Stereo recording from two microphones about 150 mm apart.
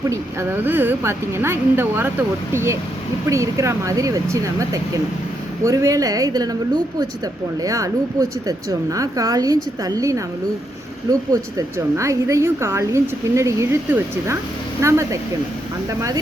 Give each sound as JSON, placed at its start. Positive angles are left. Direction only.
{"t": 0.1, "sound": "speech", "side_deg": -15}
{"t": 7.6, "sound": "speech", "side_deg": -25}
{"t": 11.3, "sound": "speech", "side_deg": -20}